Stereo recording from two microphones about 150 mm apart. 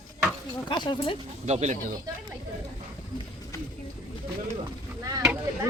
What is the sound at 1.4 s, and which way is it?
Speech, 50° right (ahead or behind).